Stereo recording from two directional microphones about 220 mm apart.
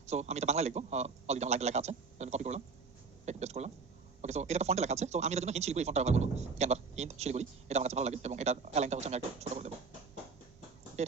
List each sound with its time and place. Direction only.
0.0 s speech: 30° right (ahead or behind)